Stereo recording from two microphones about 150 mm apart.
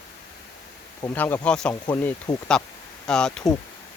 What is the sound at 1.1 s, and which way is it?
Speech, 10° left (ahead or behind).